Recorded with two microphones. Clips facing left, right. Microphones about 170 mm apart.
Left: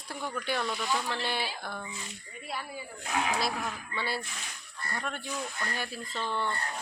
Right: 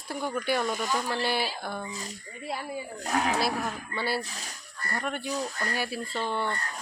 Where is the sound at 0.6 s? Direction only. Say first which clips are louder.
Right 3 dB; 45° right (ahead or behind).